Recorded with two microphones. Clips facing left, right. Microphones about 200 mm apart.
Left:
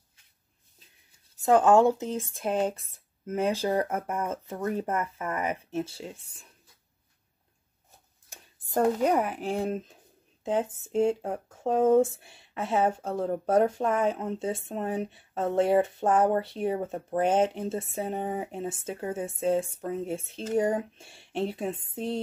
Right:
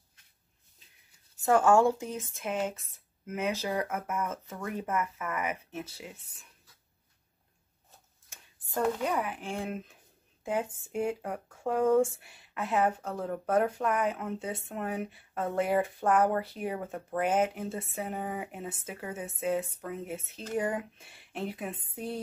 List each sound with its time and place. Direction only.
1.4 s speech: 20° left (ahead or behind)
2.3 s speech: 35° left (ahead or behind)
8.3 s speech: 40° left (ahead or behind); by 22.2 s 25° left (ahead or behind)